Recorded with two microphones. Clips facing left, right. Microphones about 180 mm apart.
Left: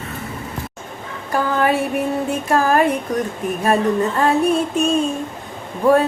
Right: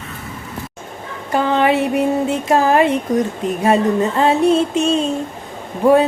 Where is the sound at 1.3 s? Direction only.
20° right (ahead or behind).